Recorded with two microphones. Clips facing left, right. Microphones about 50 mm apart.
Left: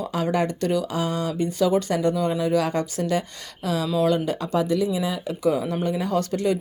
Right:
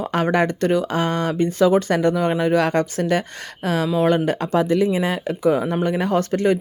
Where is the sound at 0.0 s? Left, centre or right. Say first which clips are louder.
Right 4 dB; right.